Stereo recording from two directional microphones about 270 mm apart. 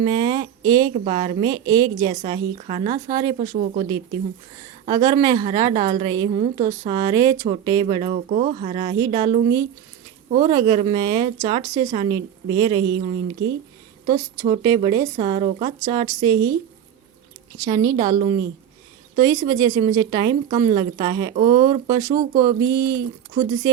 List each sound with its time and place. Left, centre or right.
0.0 s a woman's voice: centre
3.5 s speech: right
4.9 s a woman's voice: centre
17.7 s a woman's voice: centre